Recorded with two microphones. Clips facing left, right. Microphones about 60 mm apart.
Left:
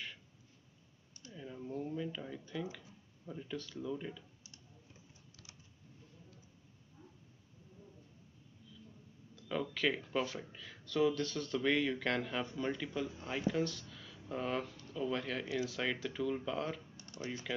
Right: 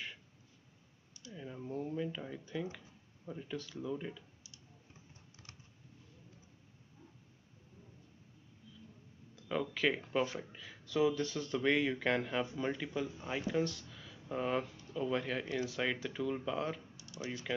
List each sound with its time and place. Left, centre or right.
1.3 s speech: centre
9.3 s speech: centre
10.0 s speech: right
10.4 s speech: centre
16.9 s typing: left